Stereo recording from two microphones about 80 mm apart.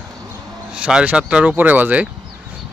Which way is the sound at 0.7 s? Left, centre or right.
Centre.